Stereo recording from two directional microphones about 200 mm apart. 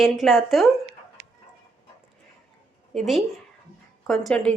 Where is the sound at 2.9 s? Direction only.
Centre (ahead or behind).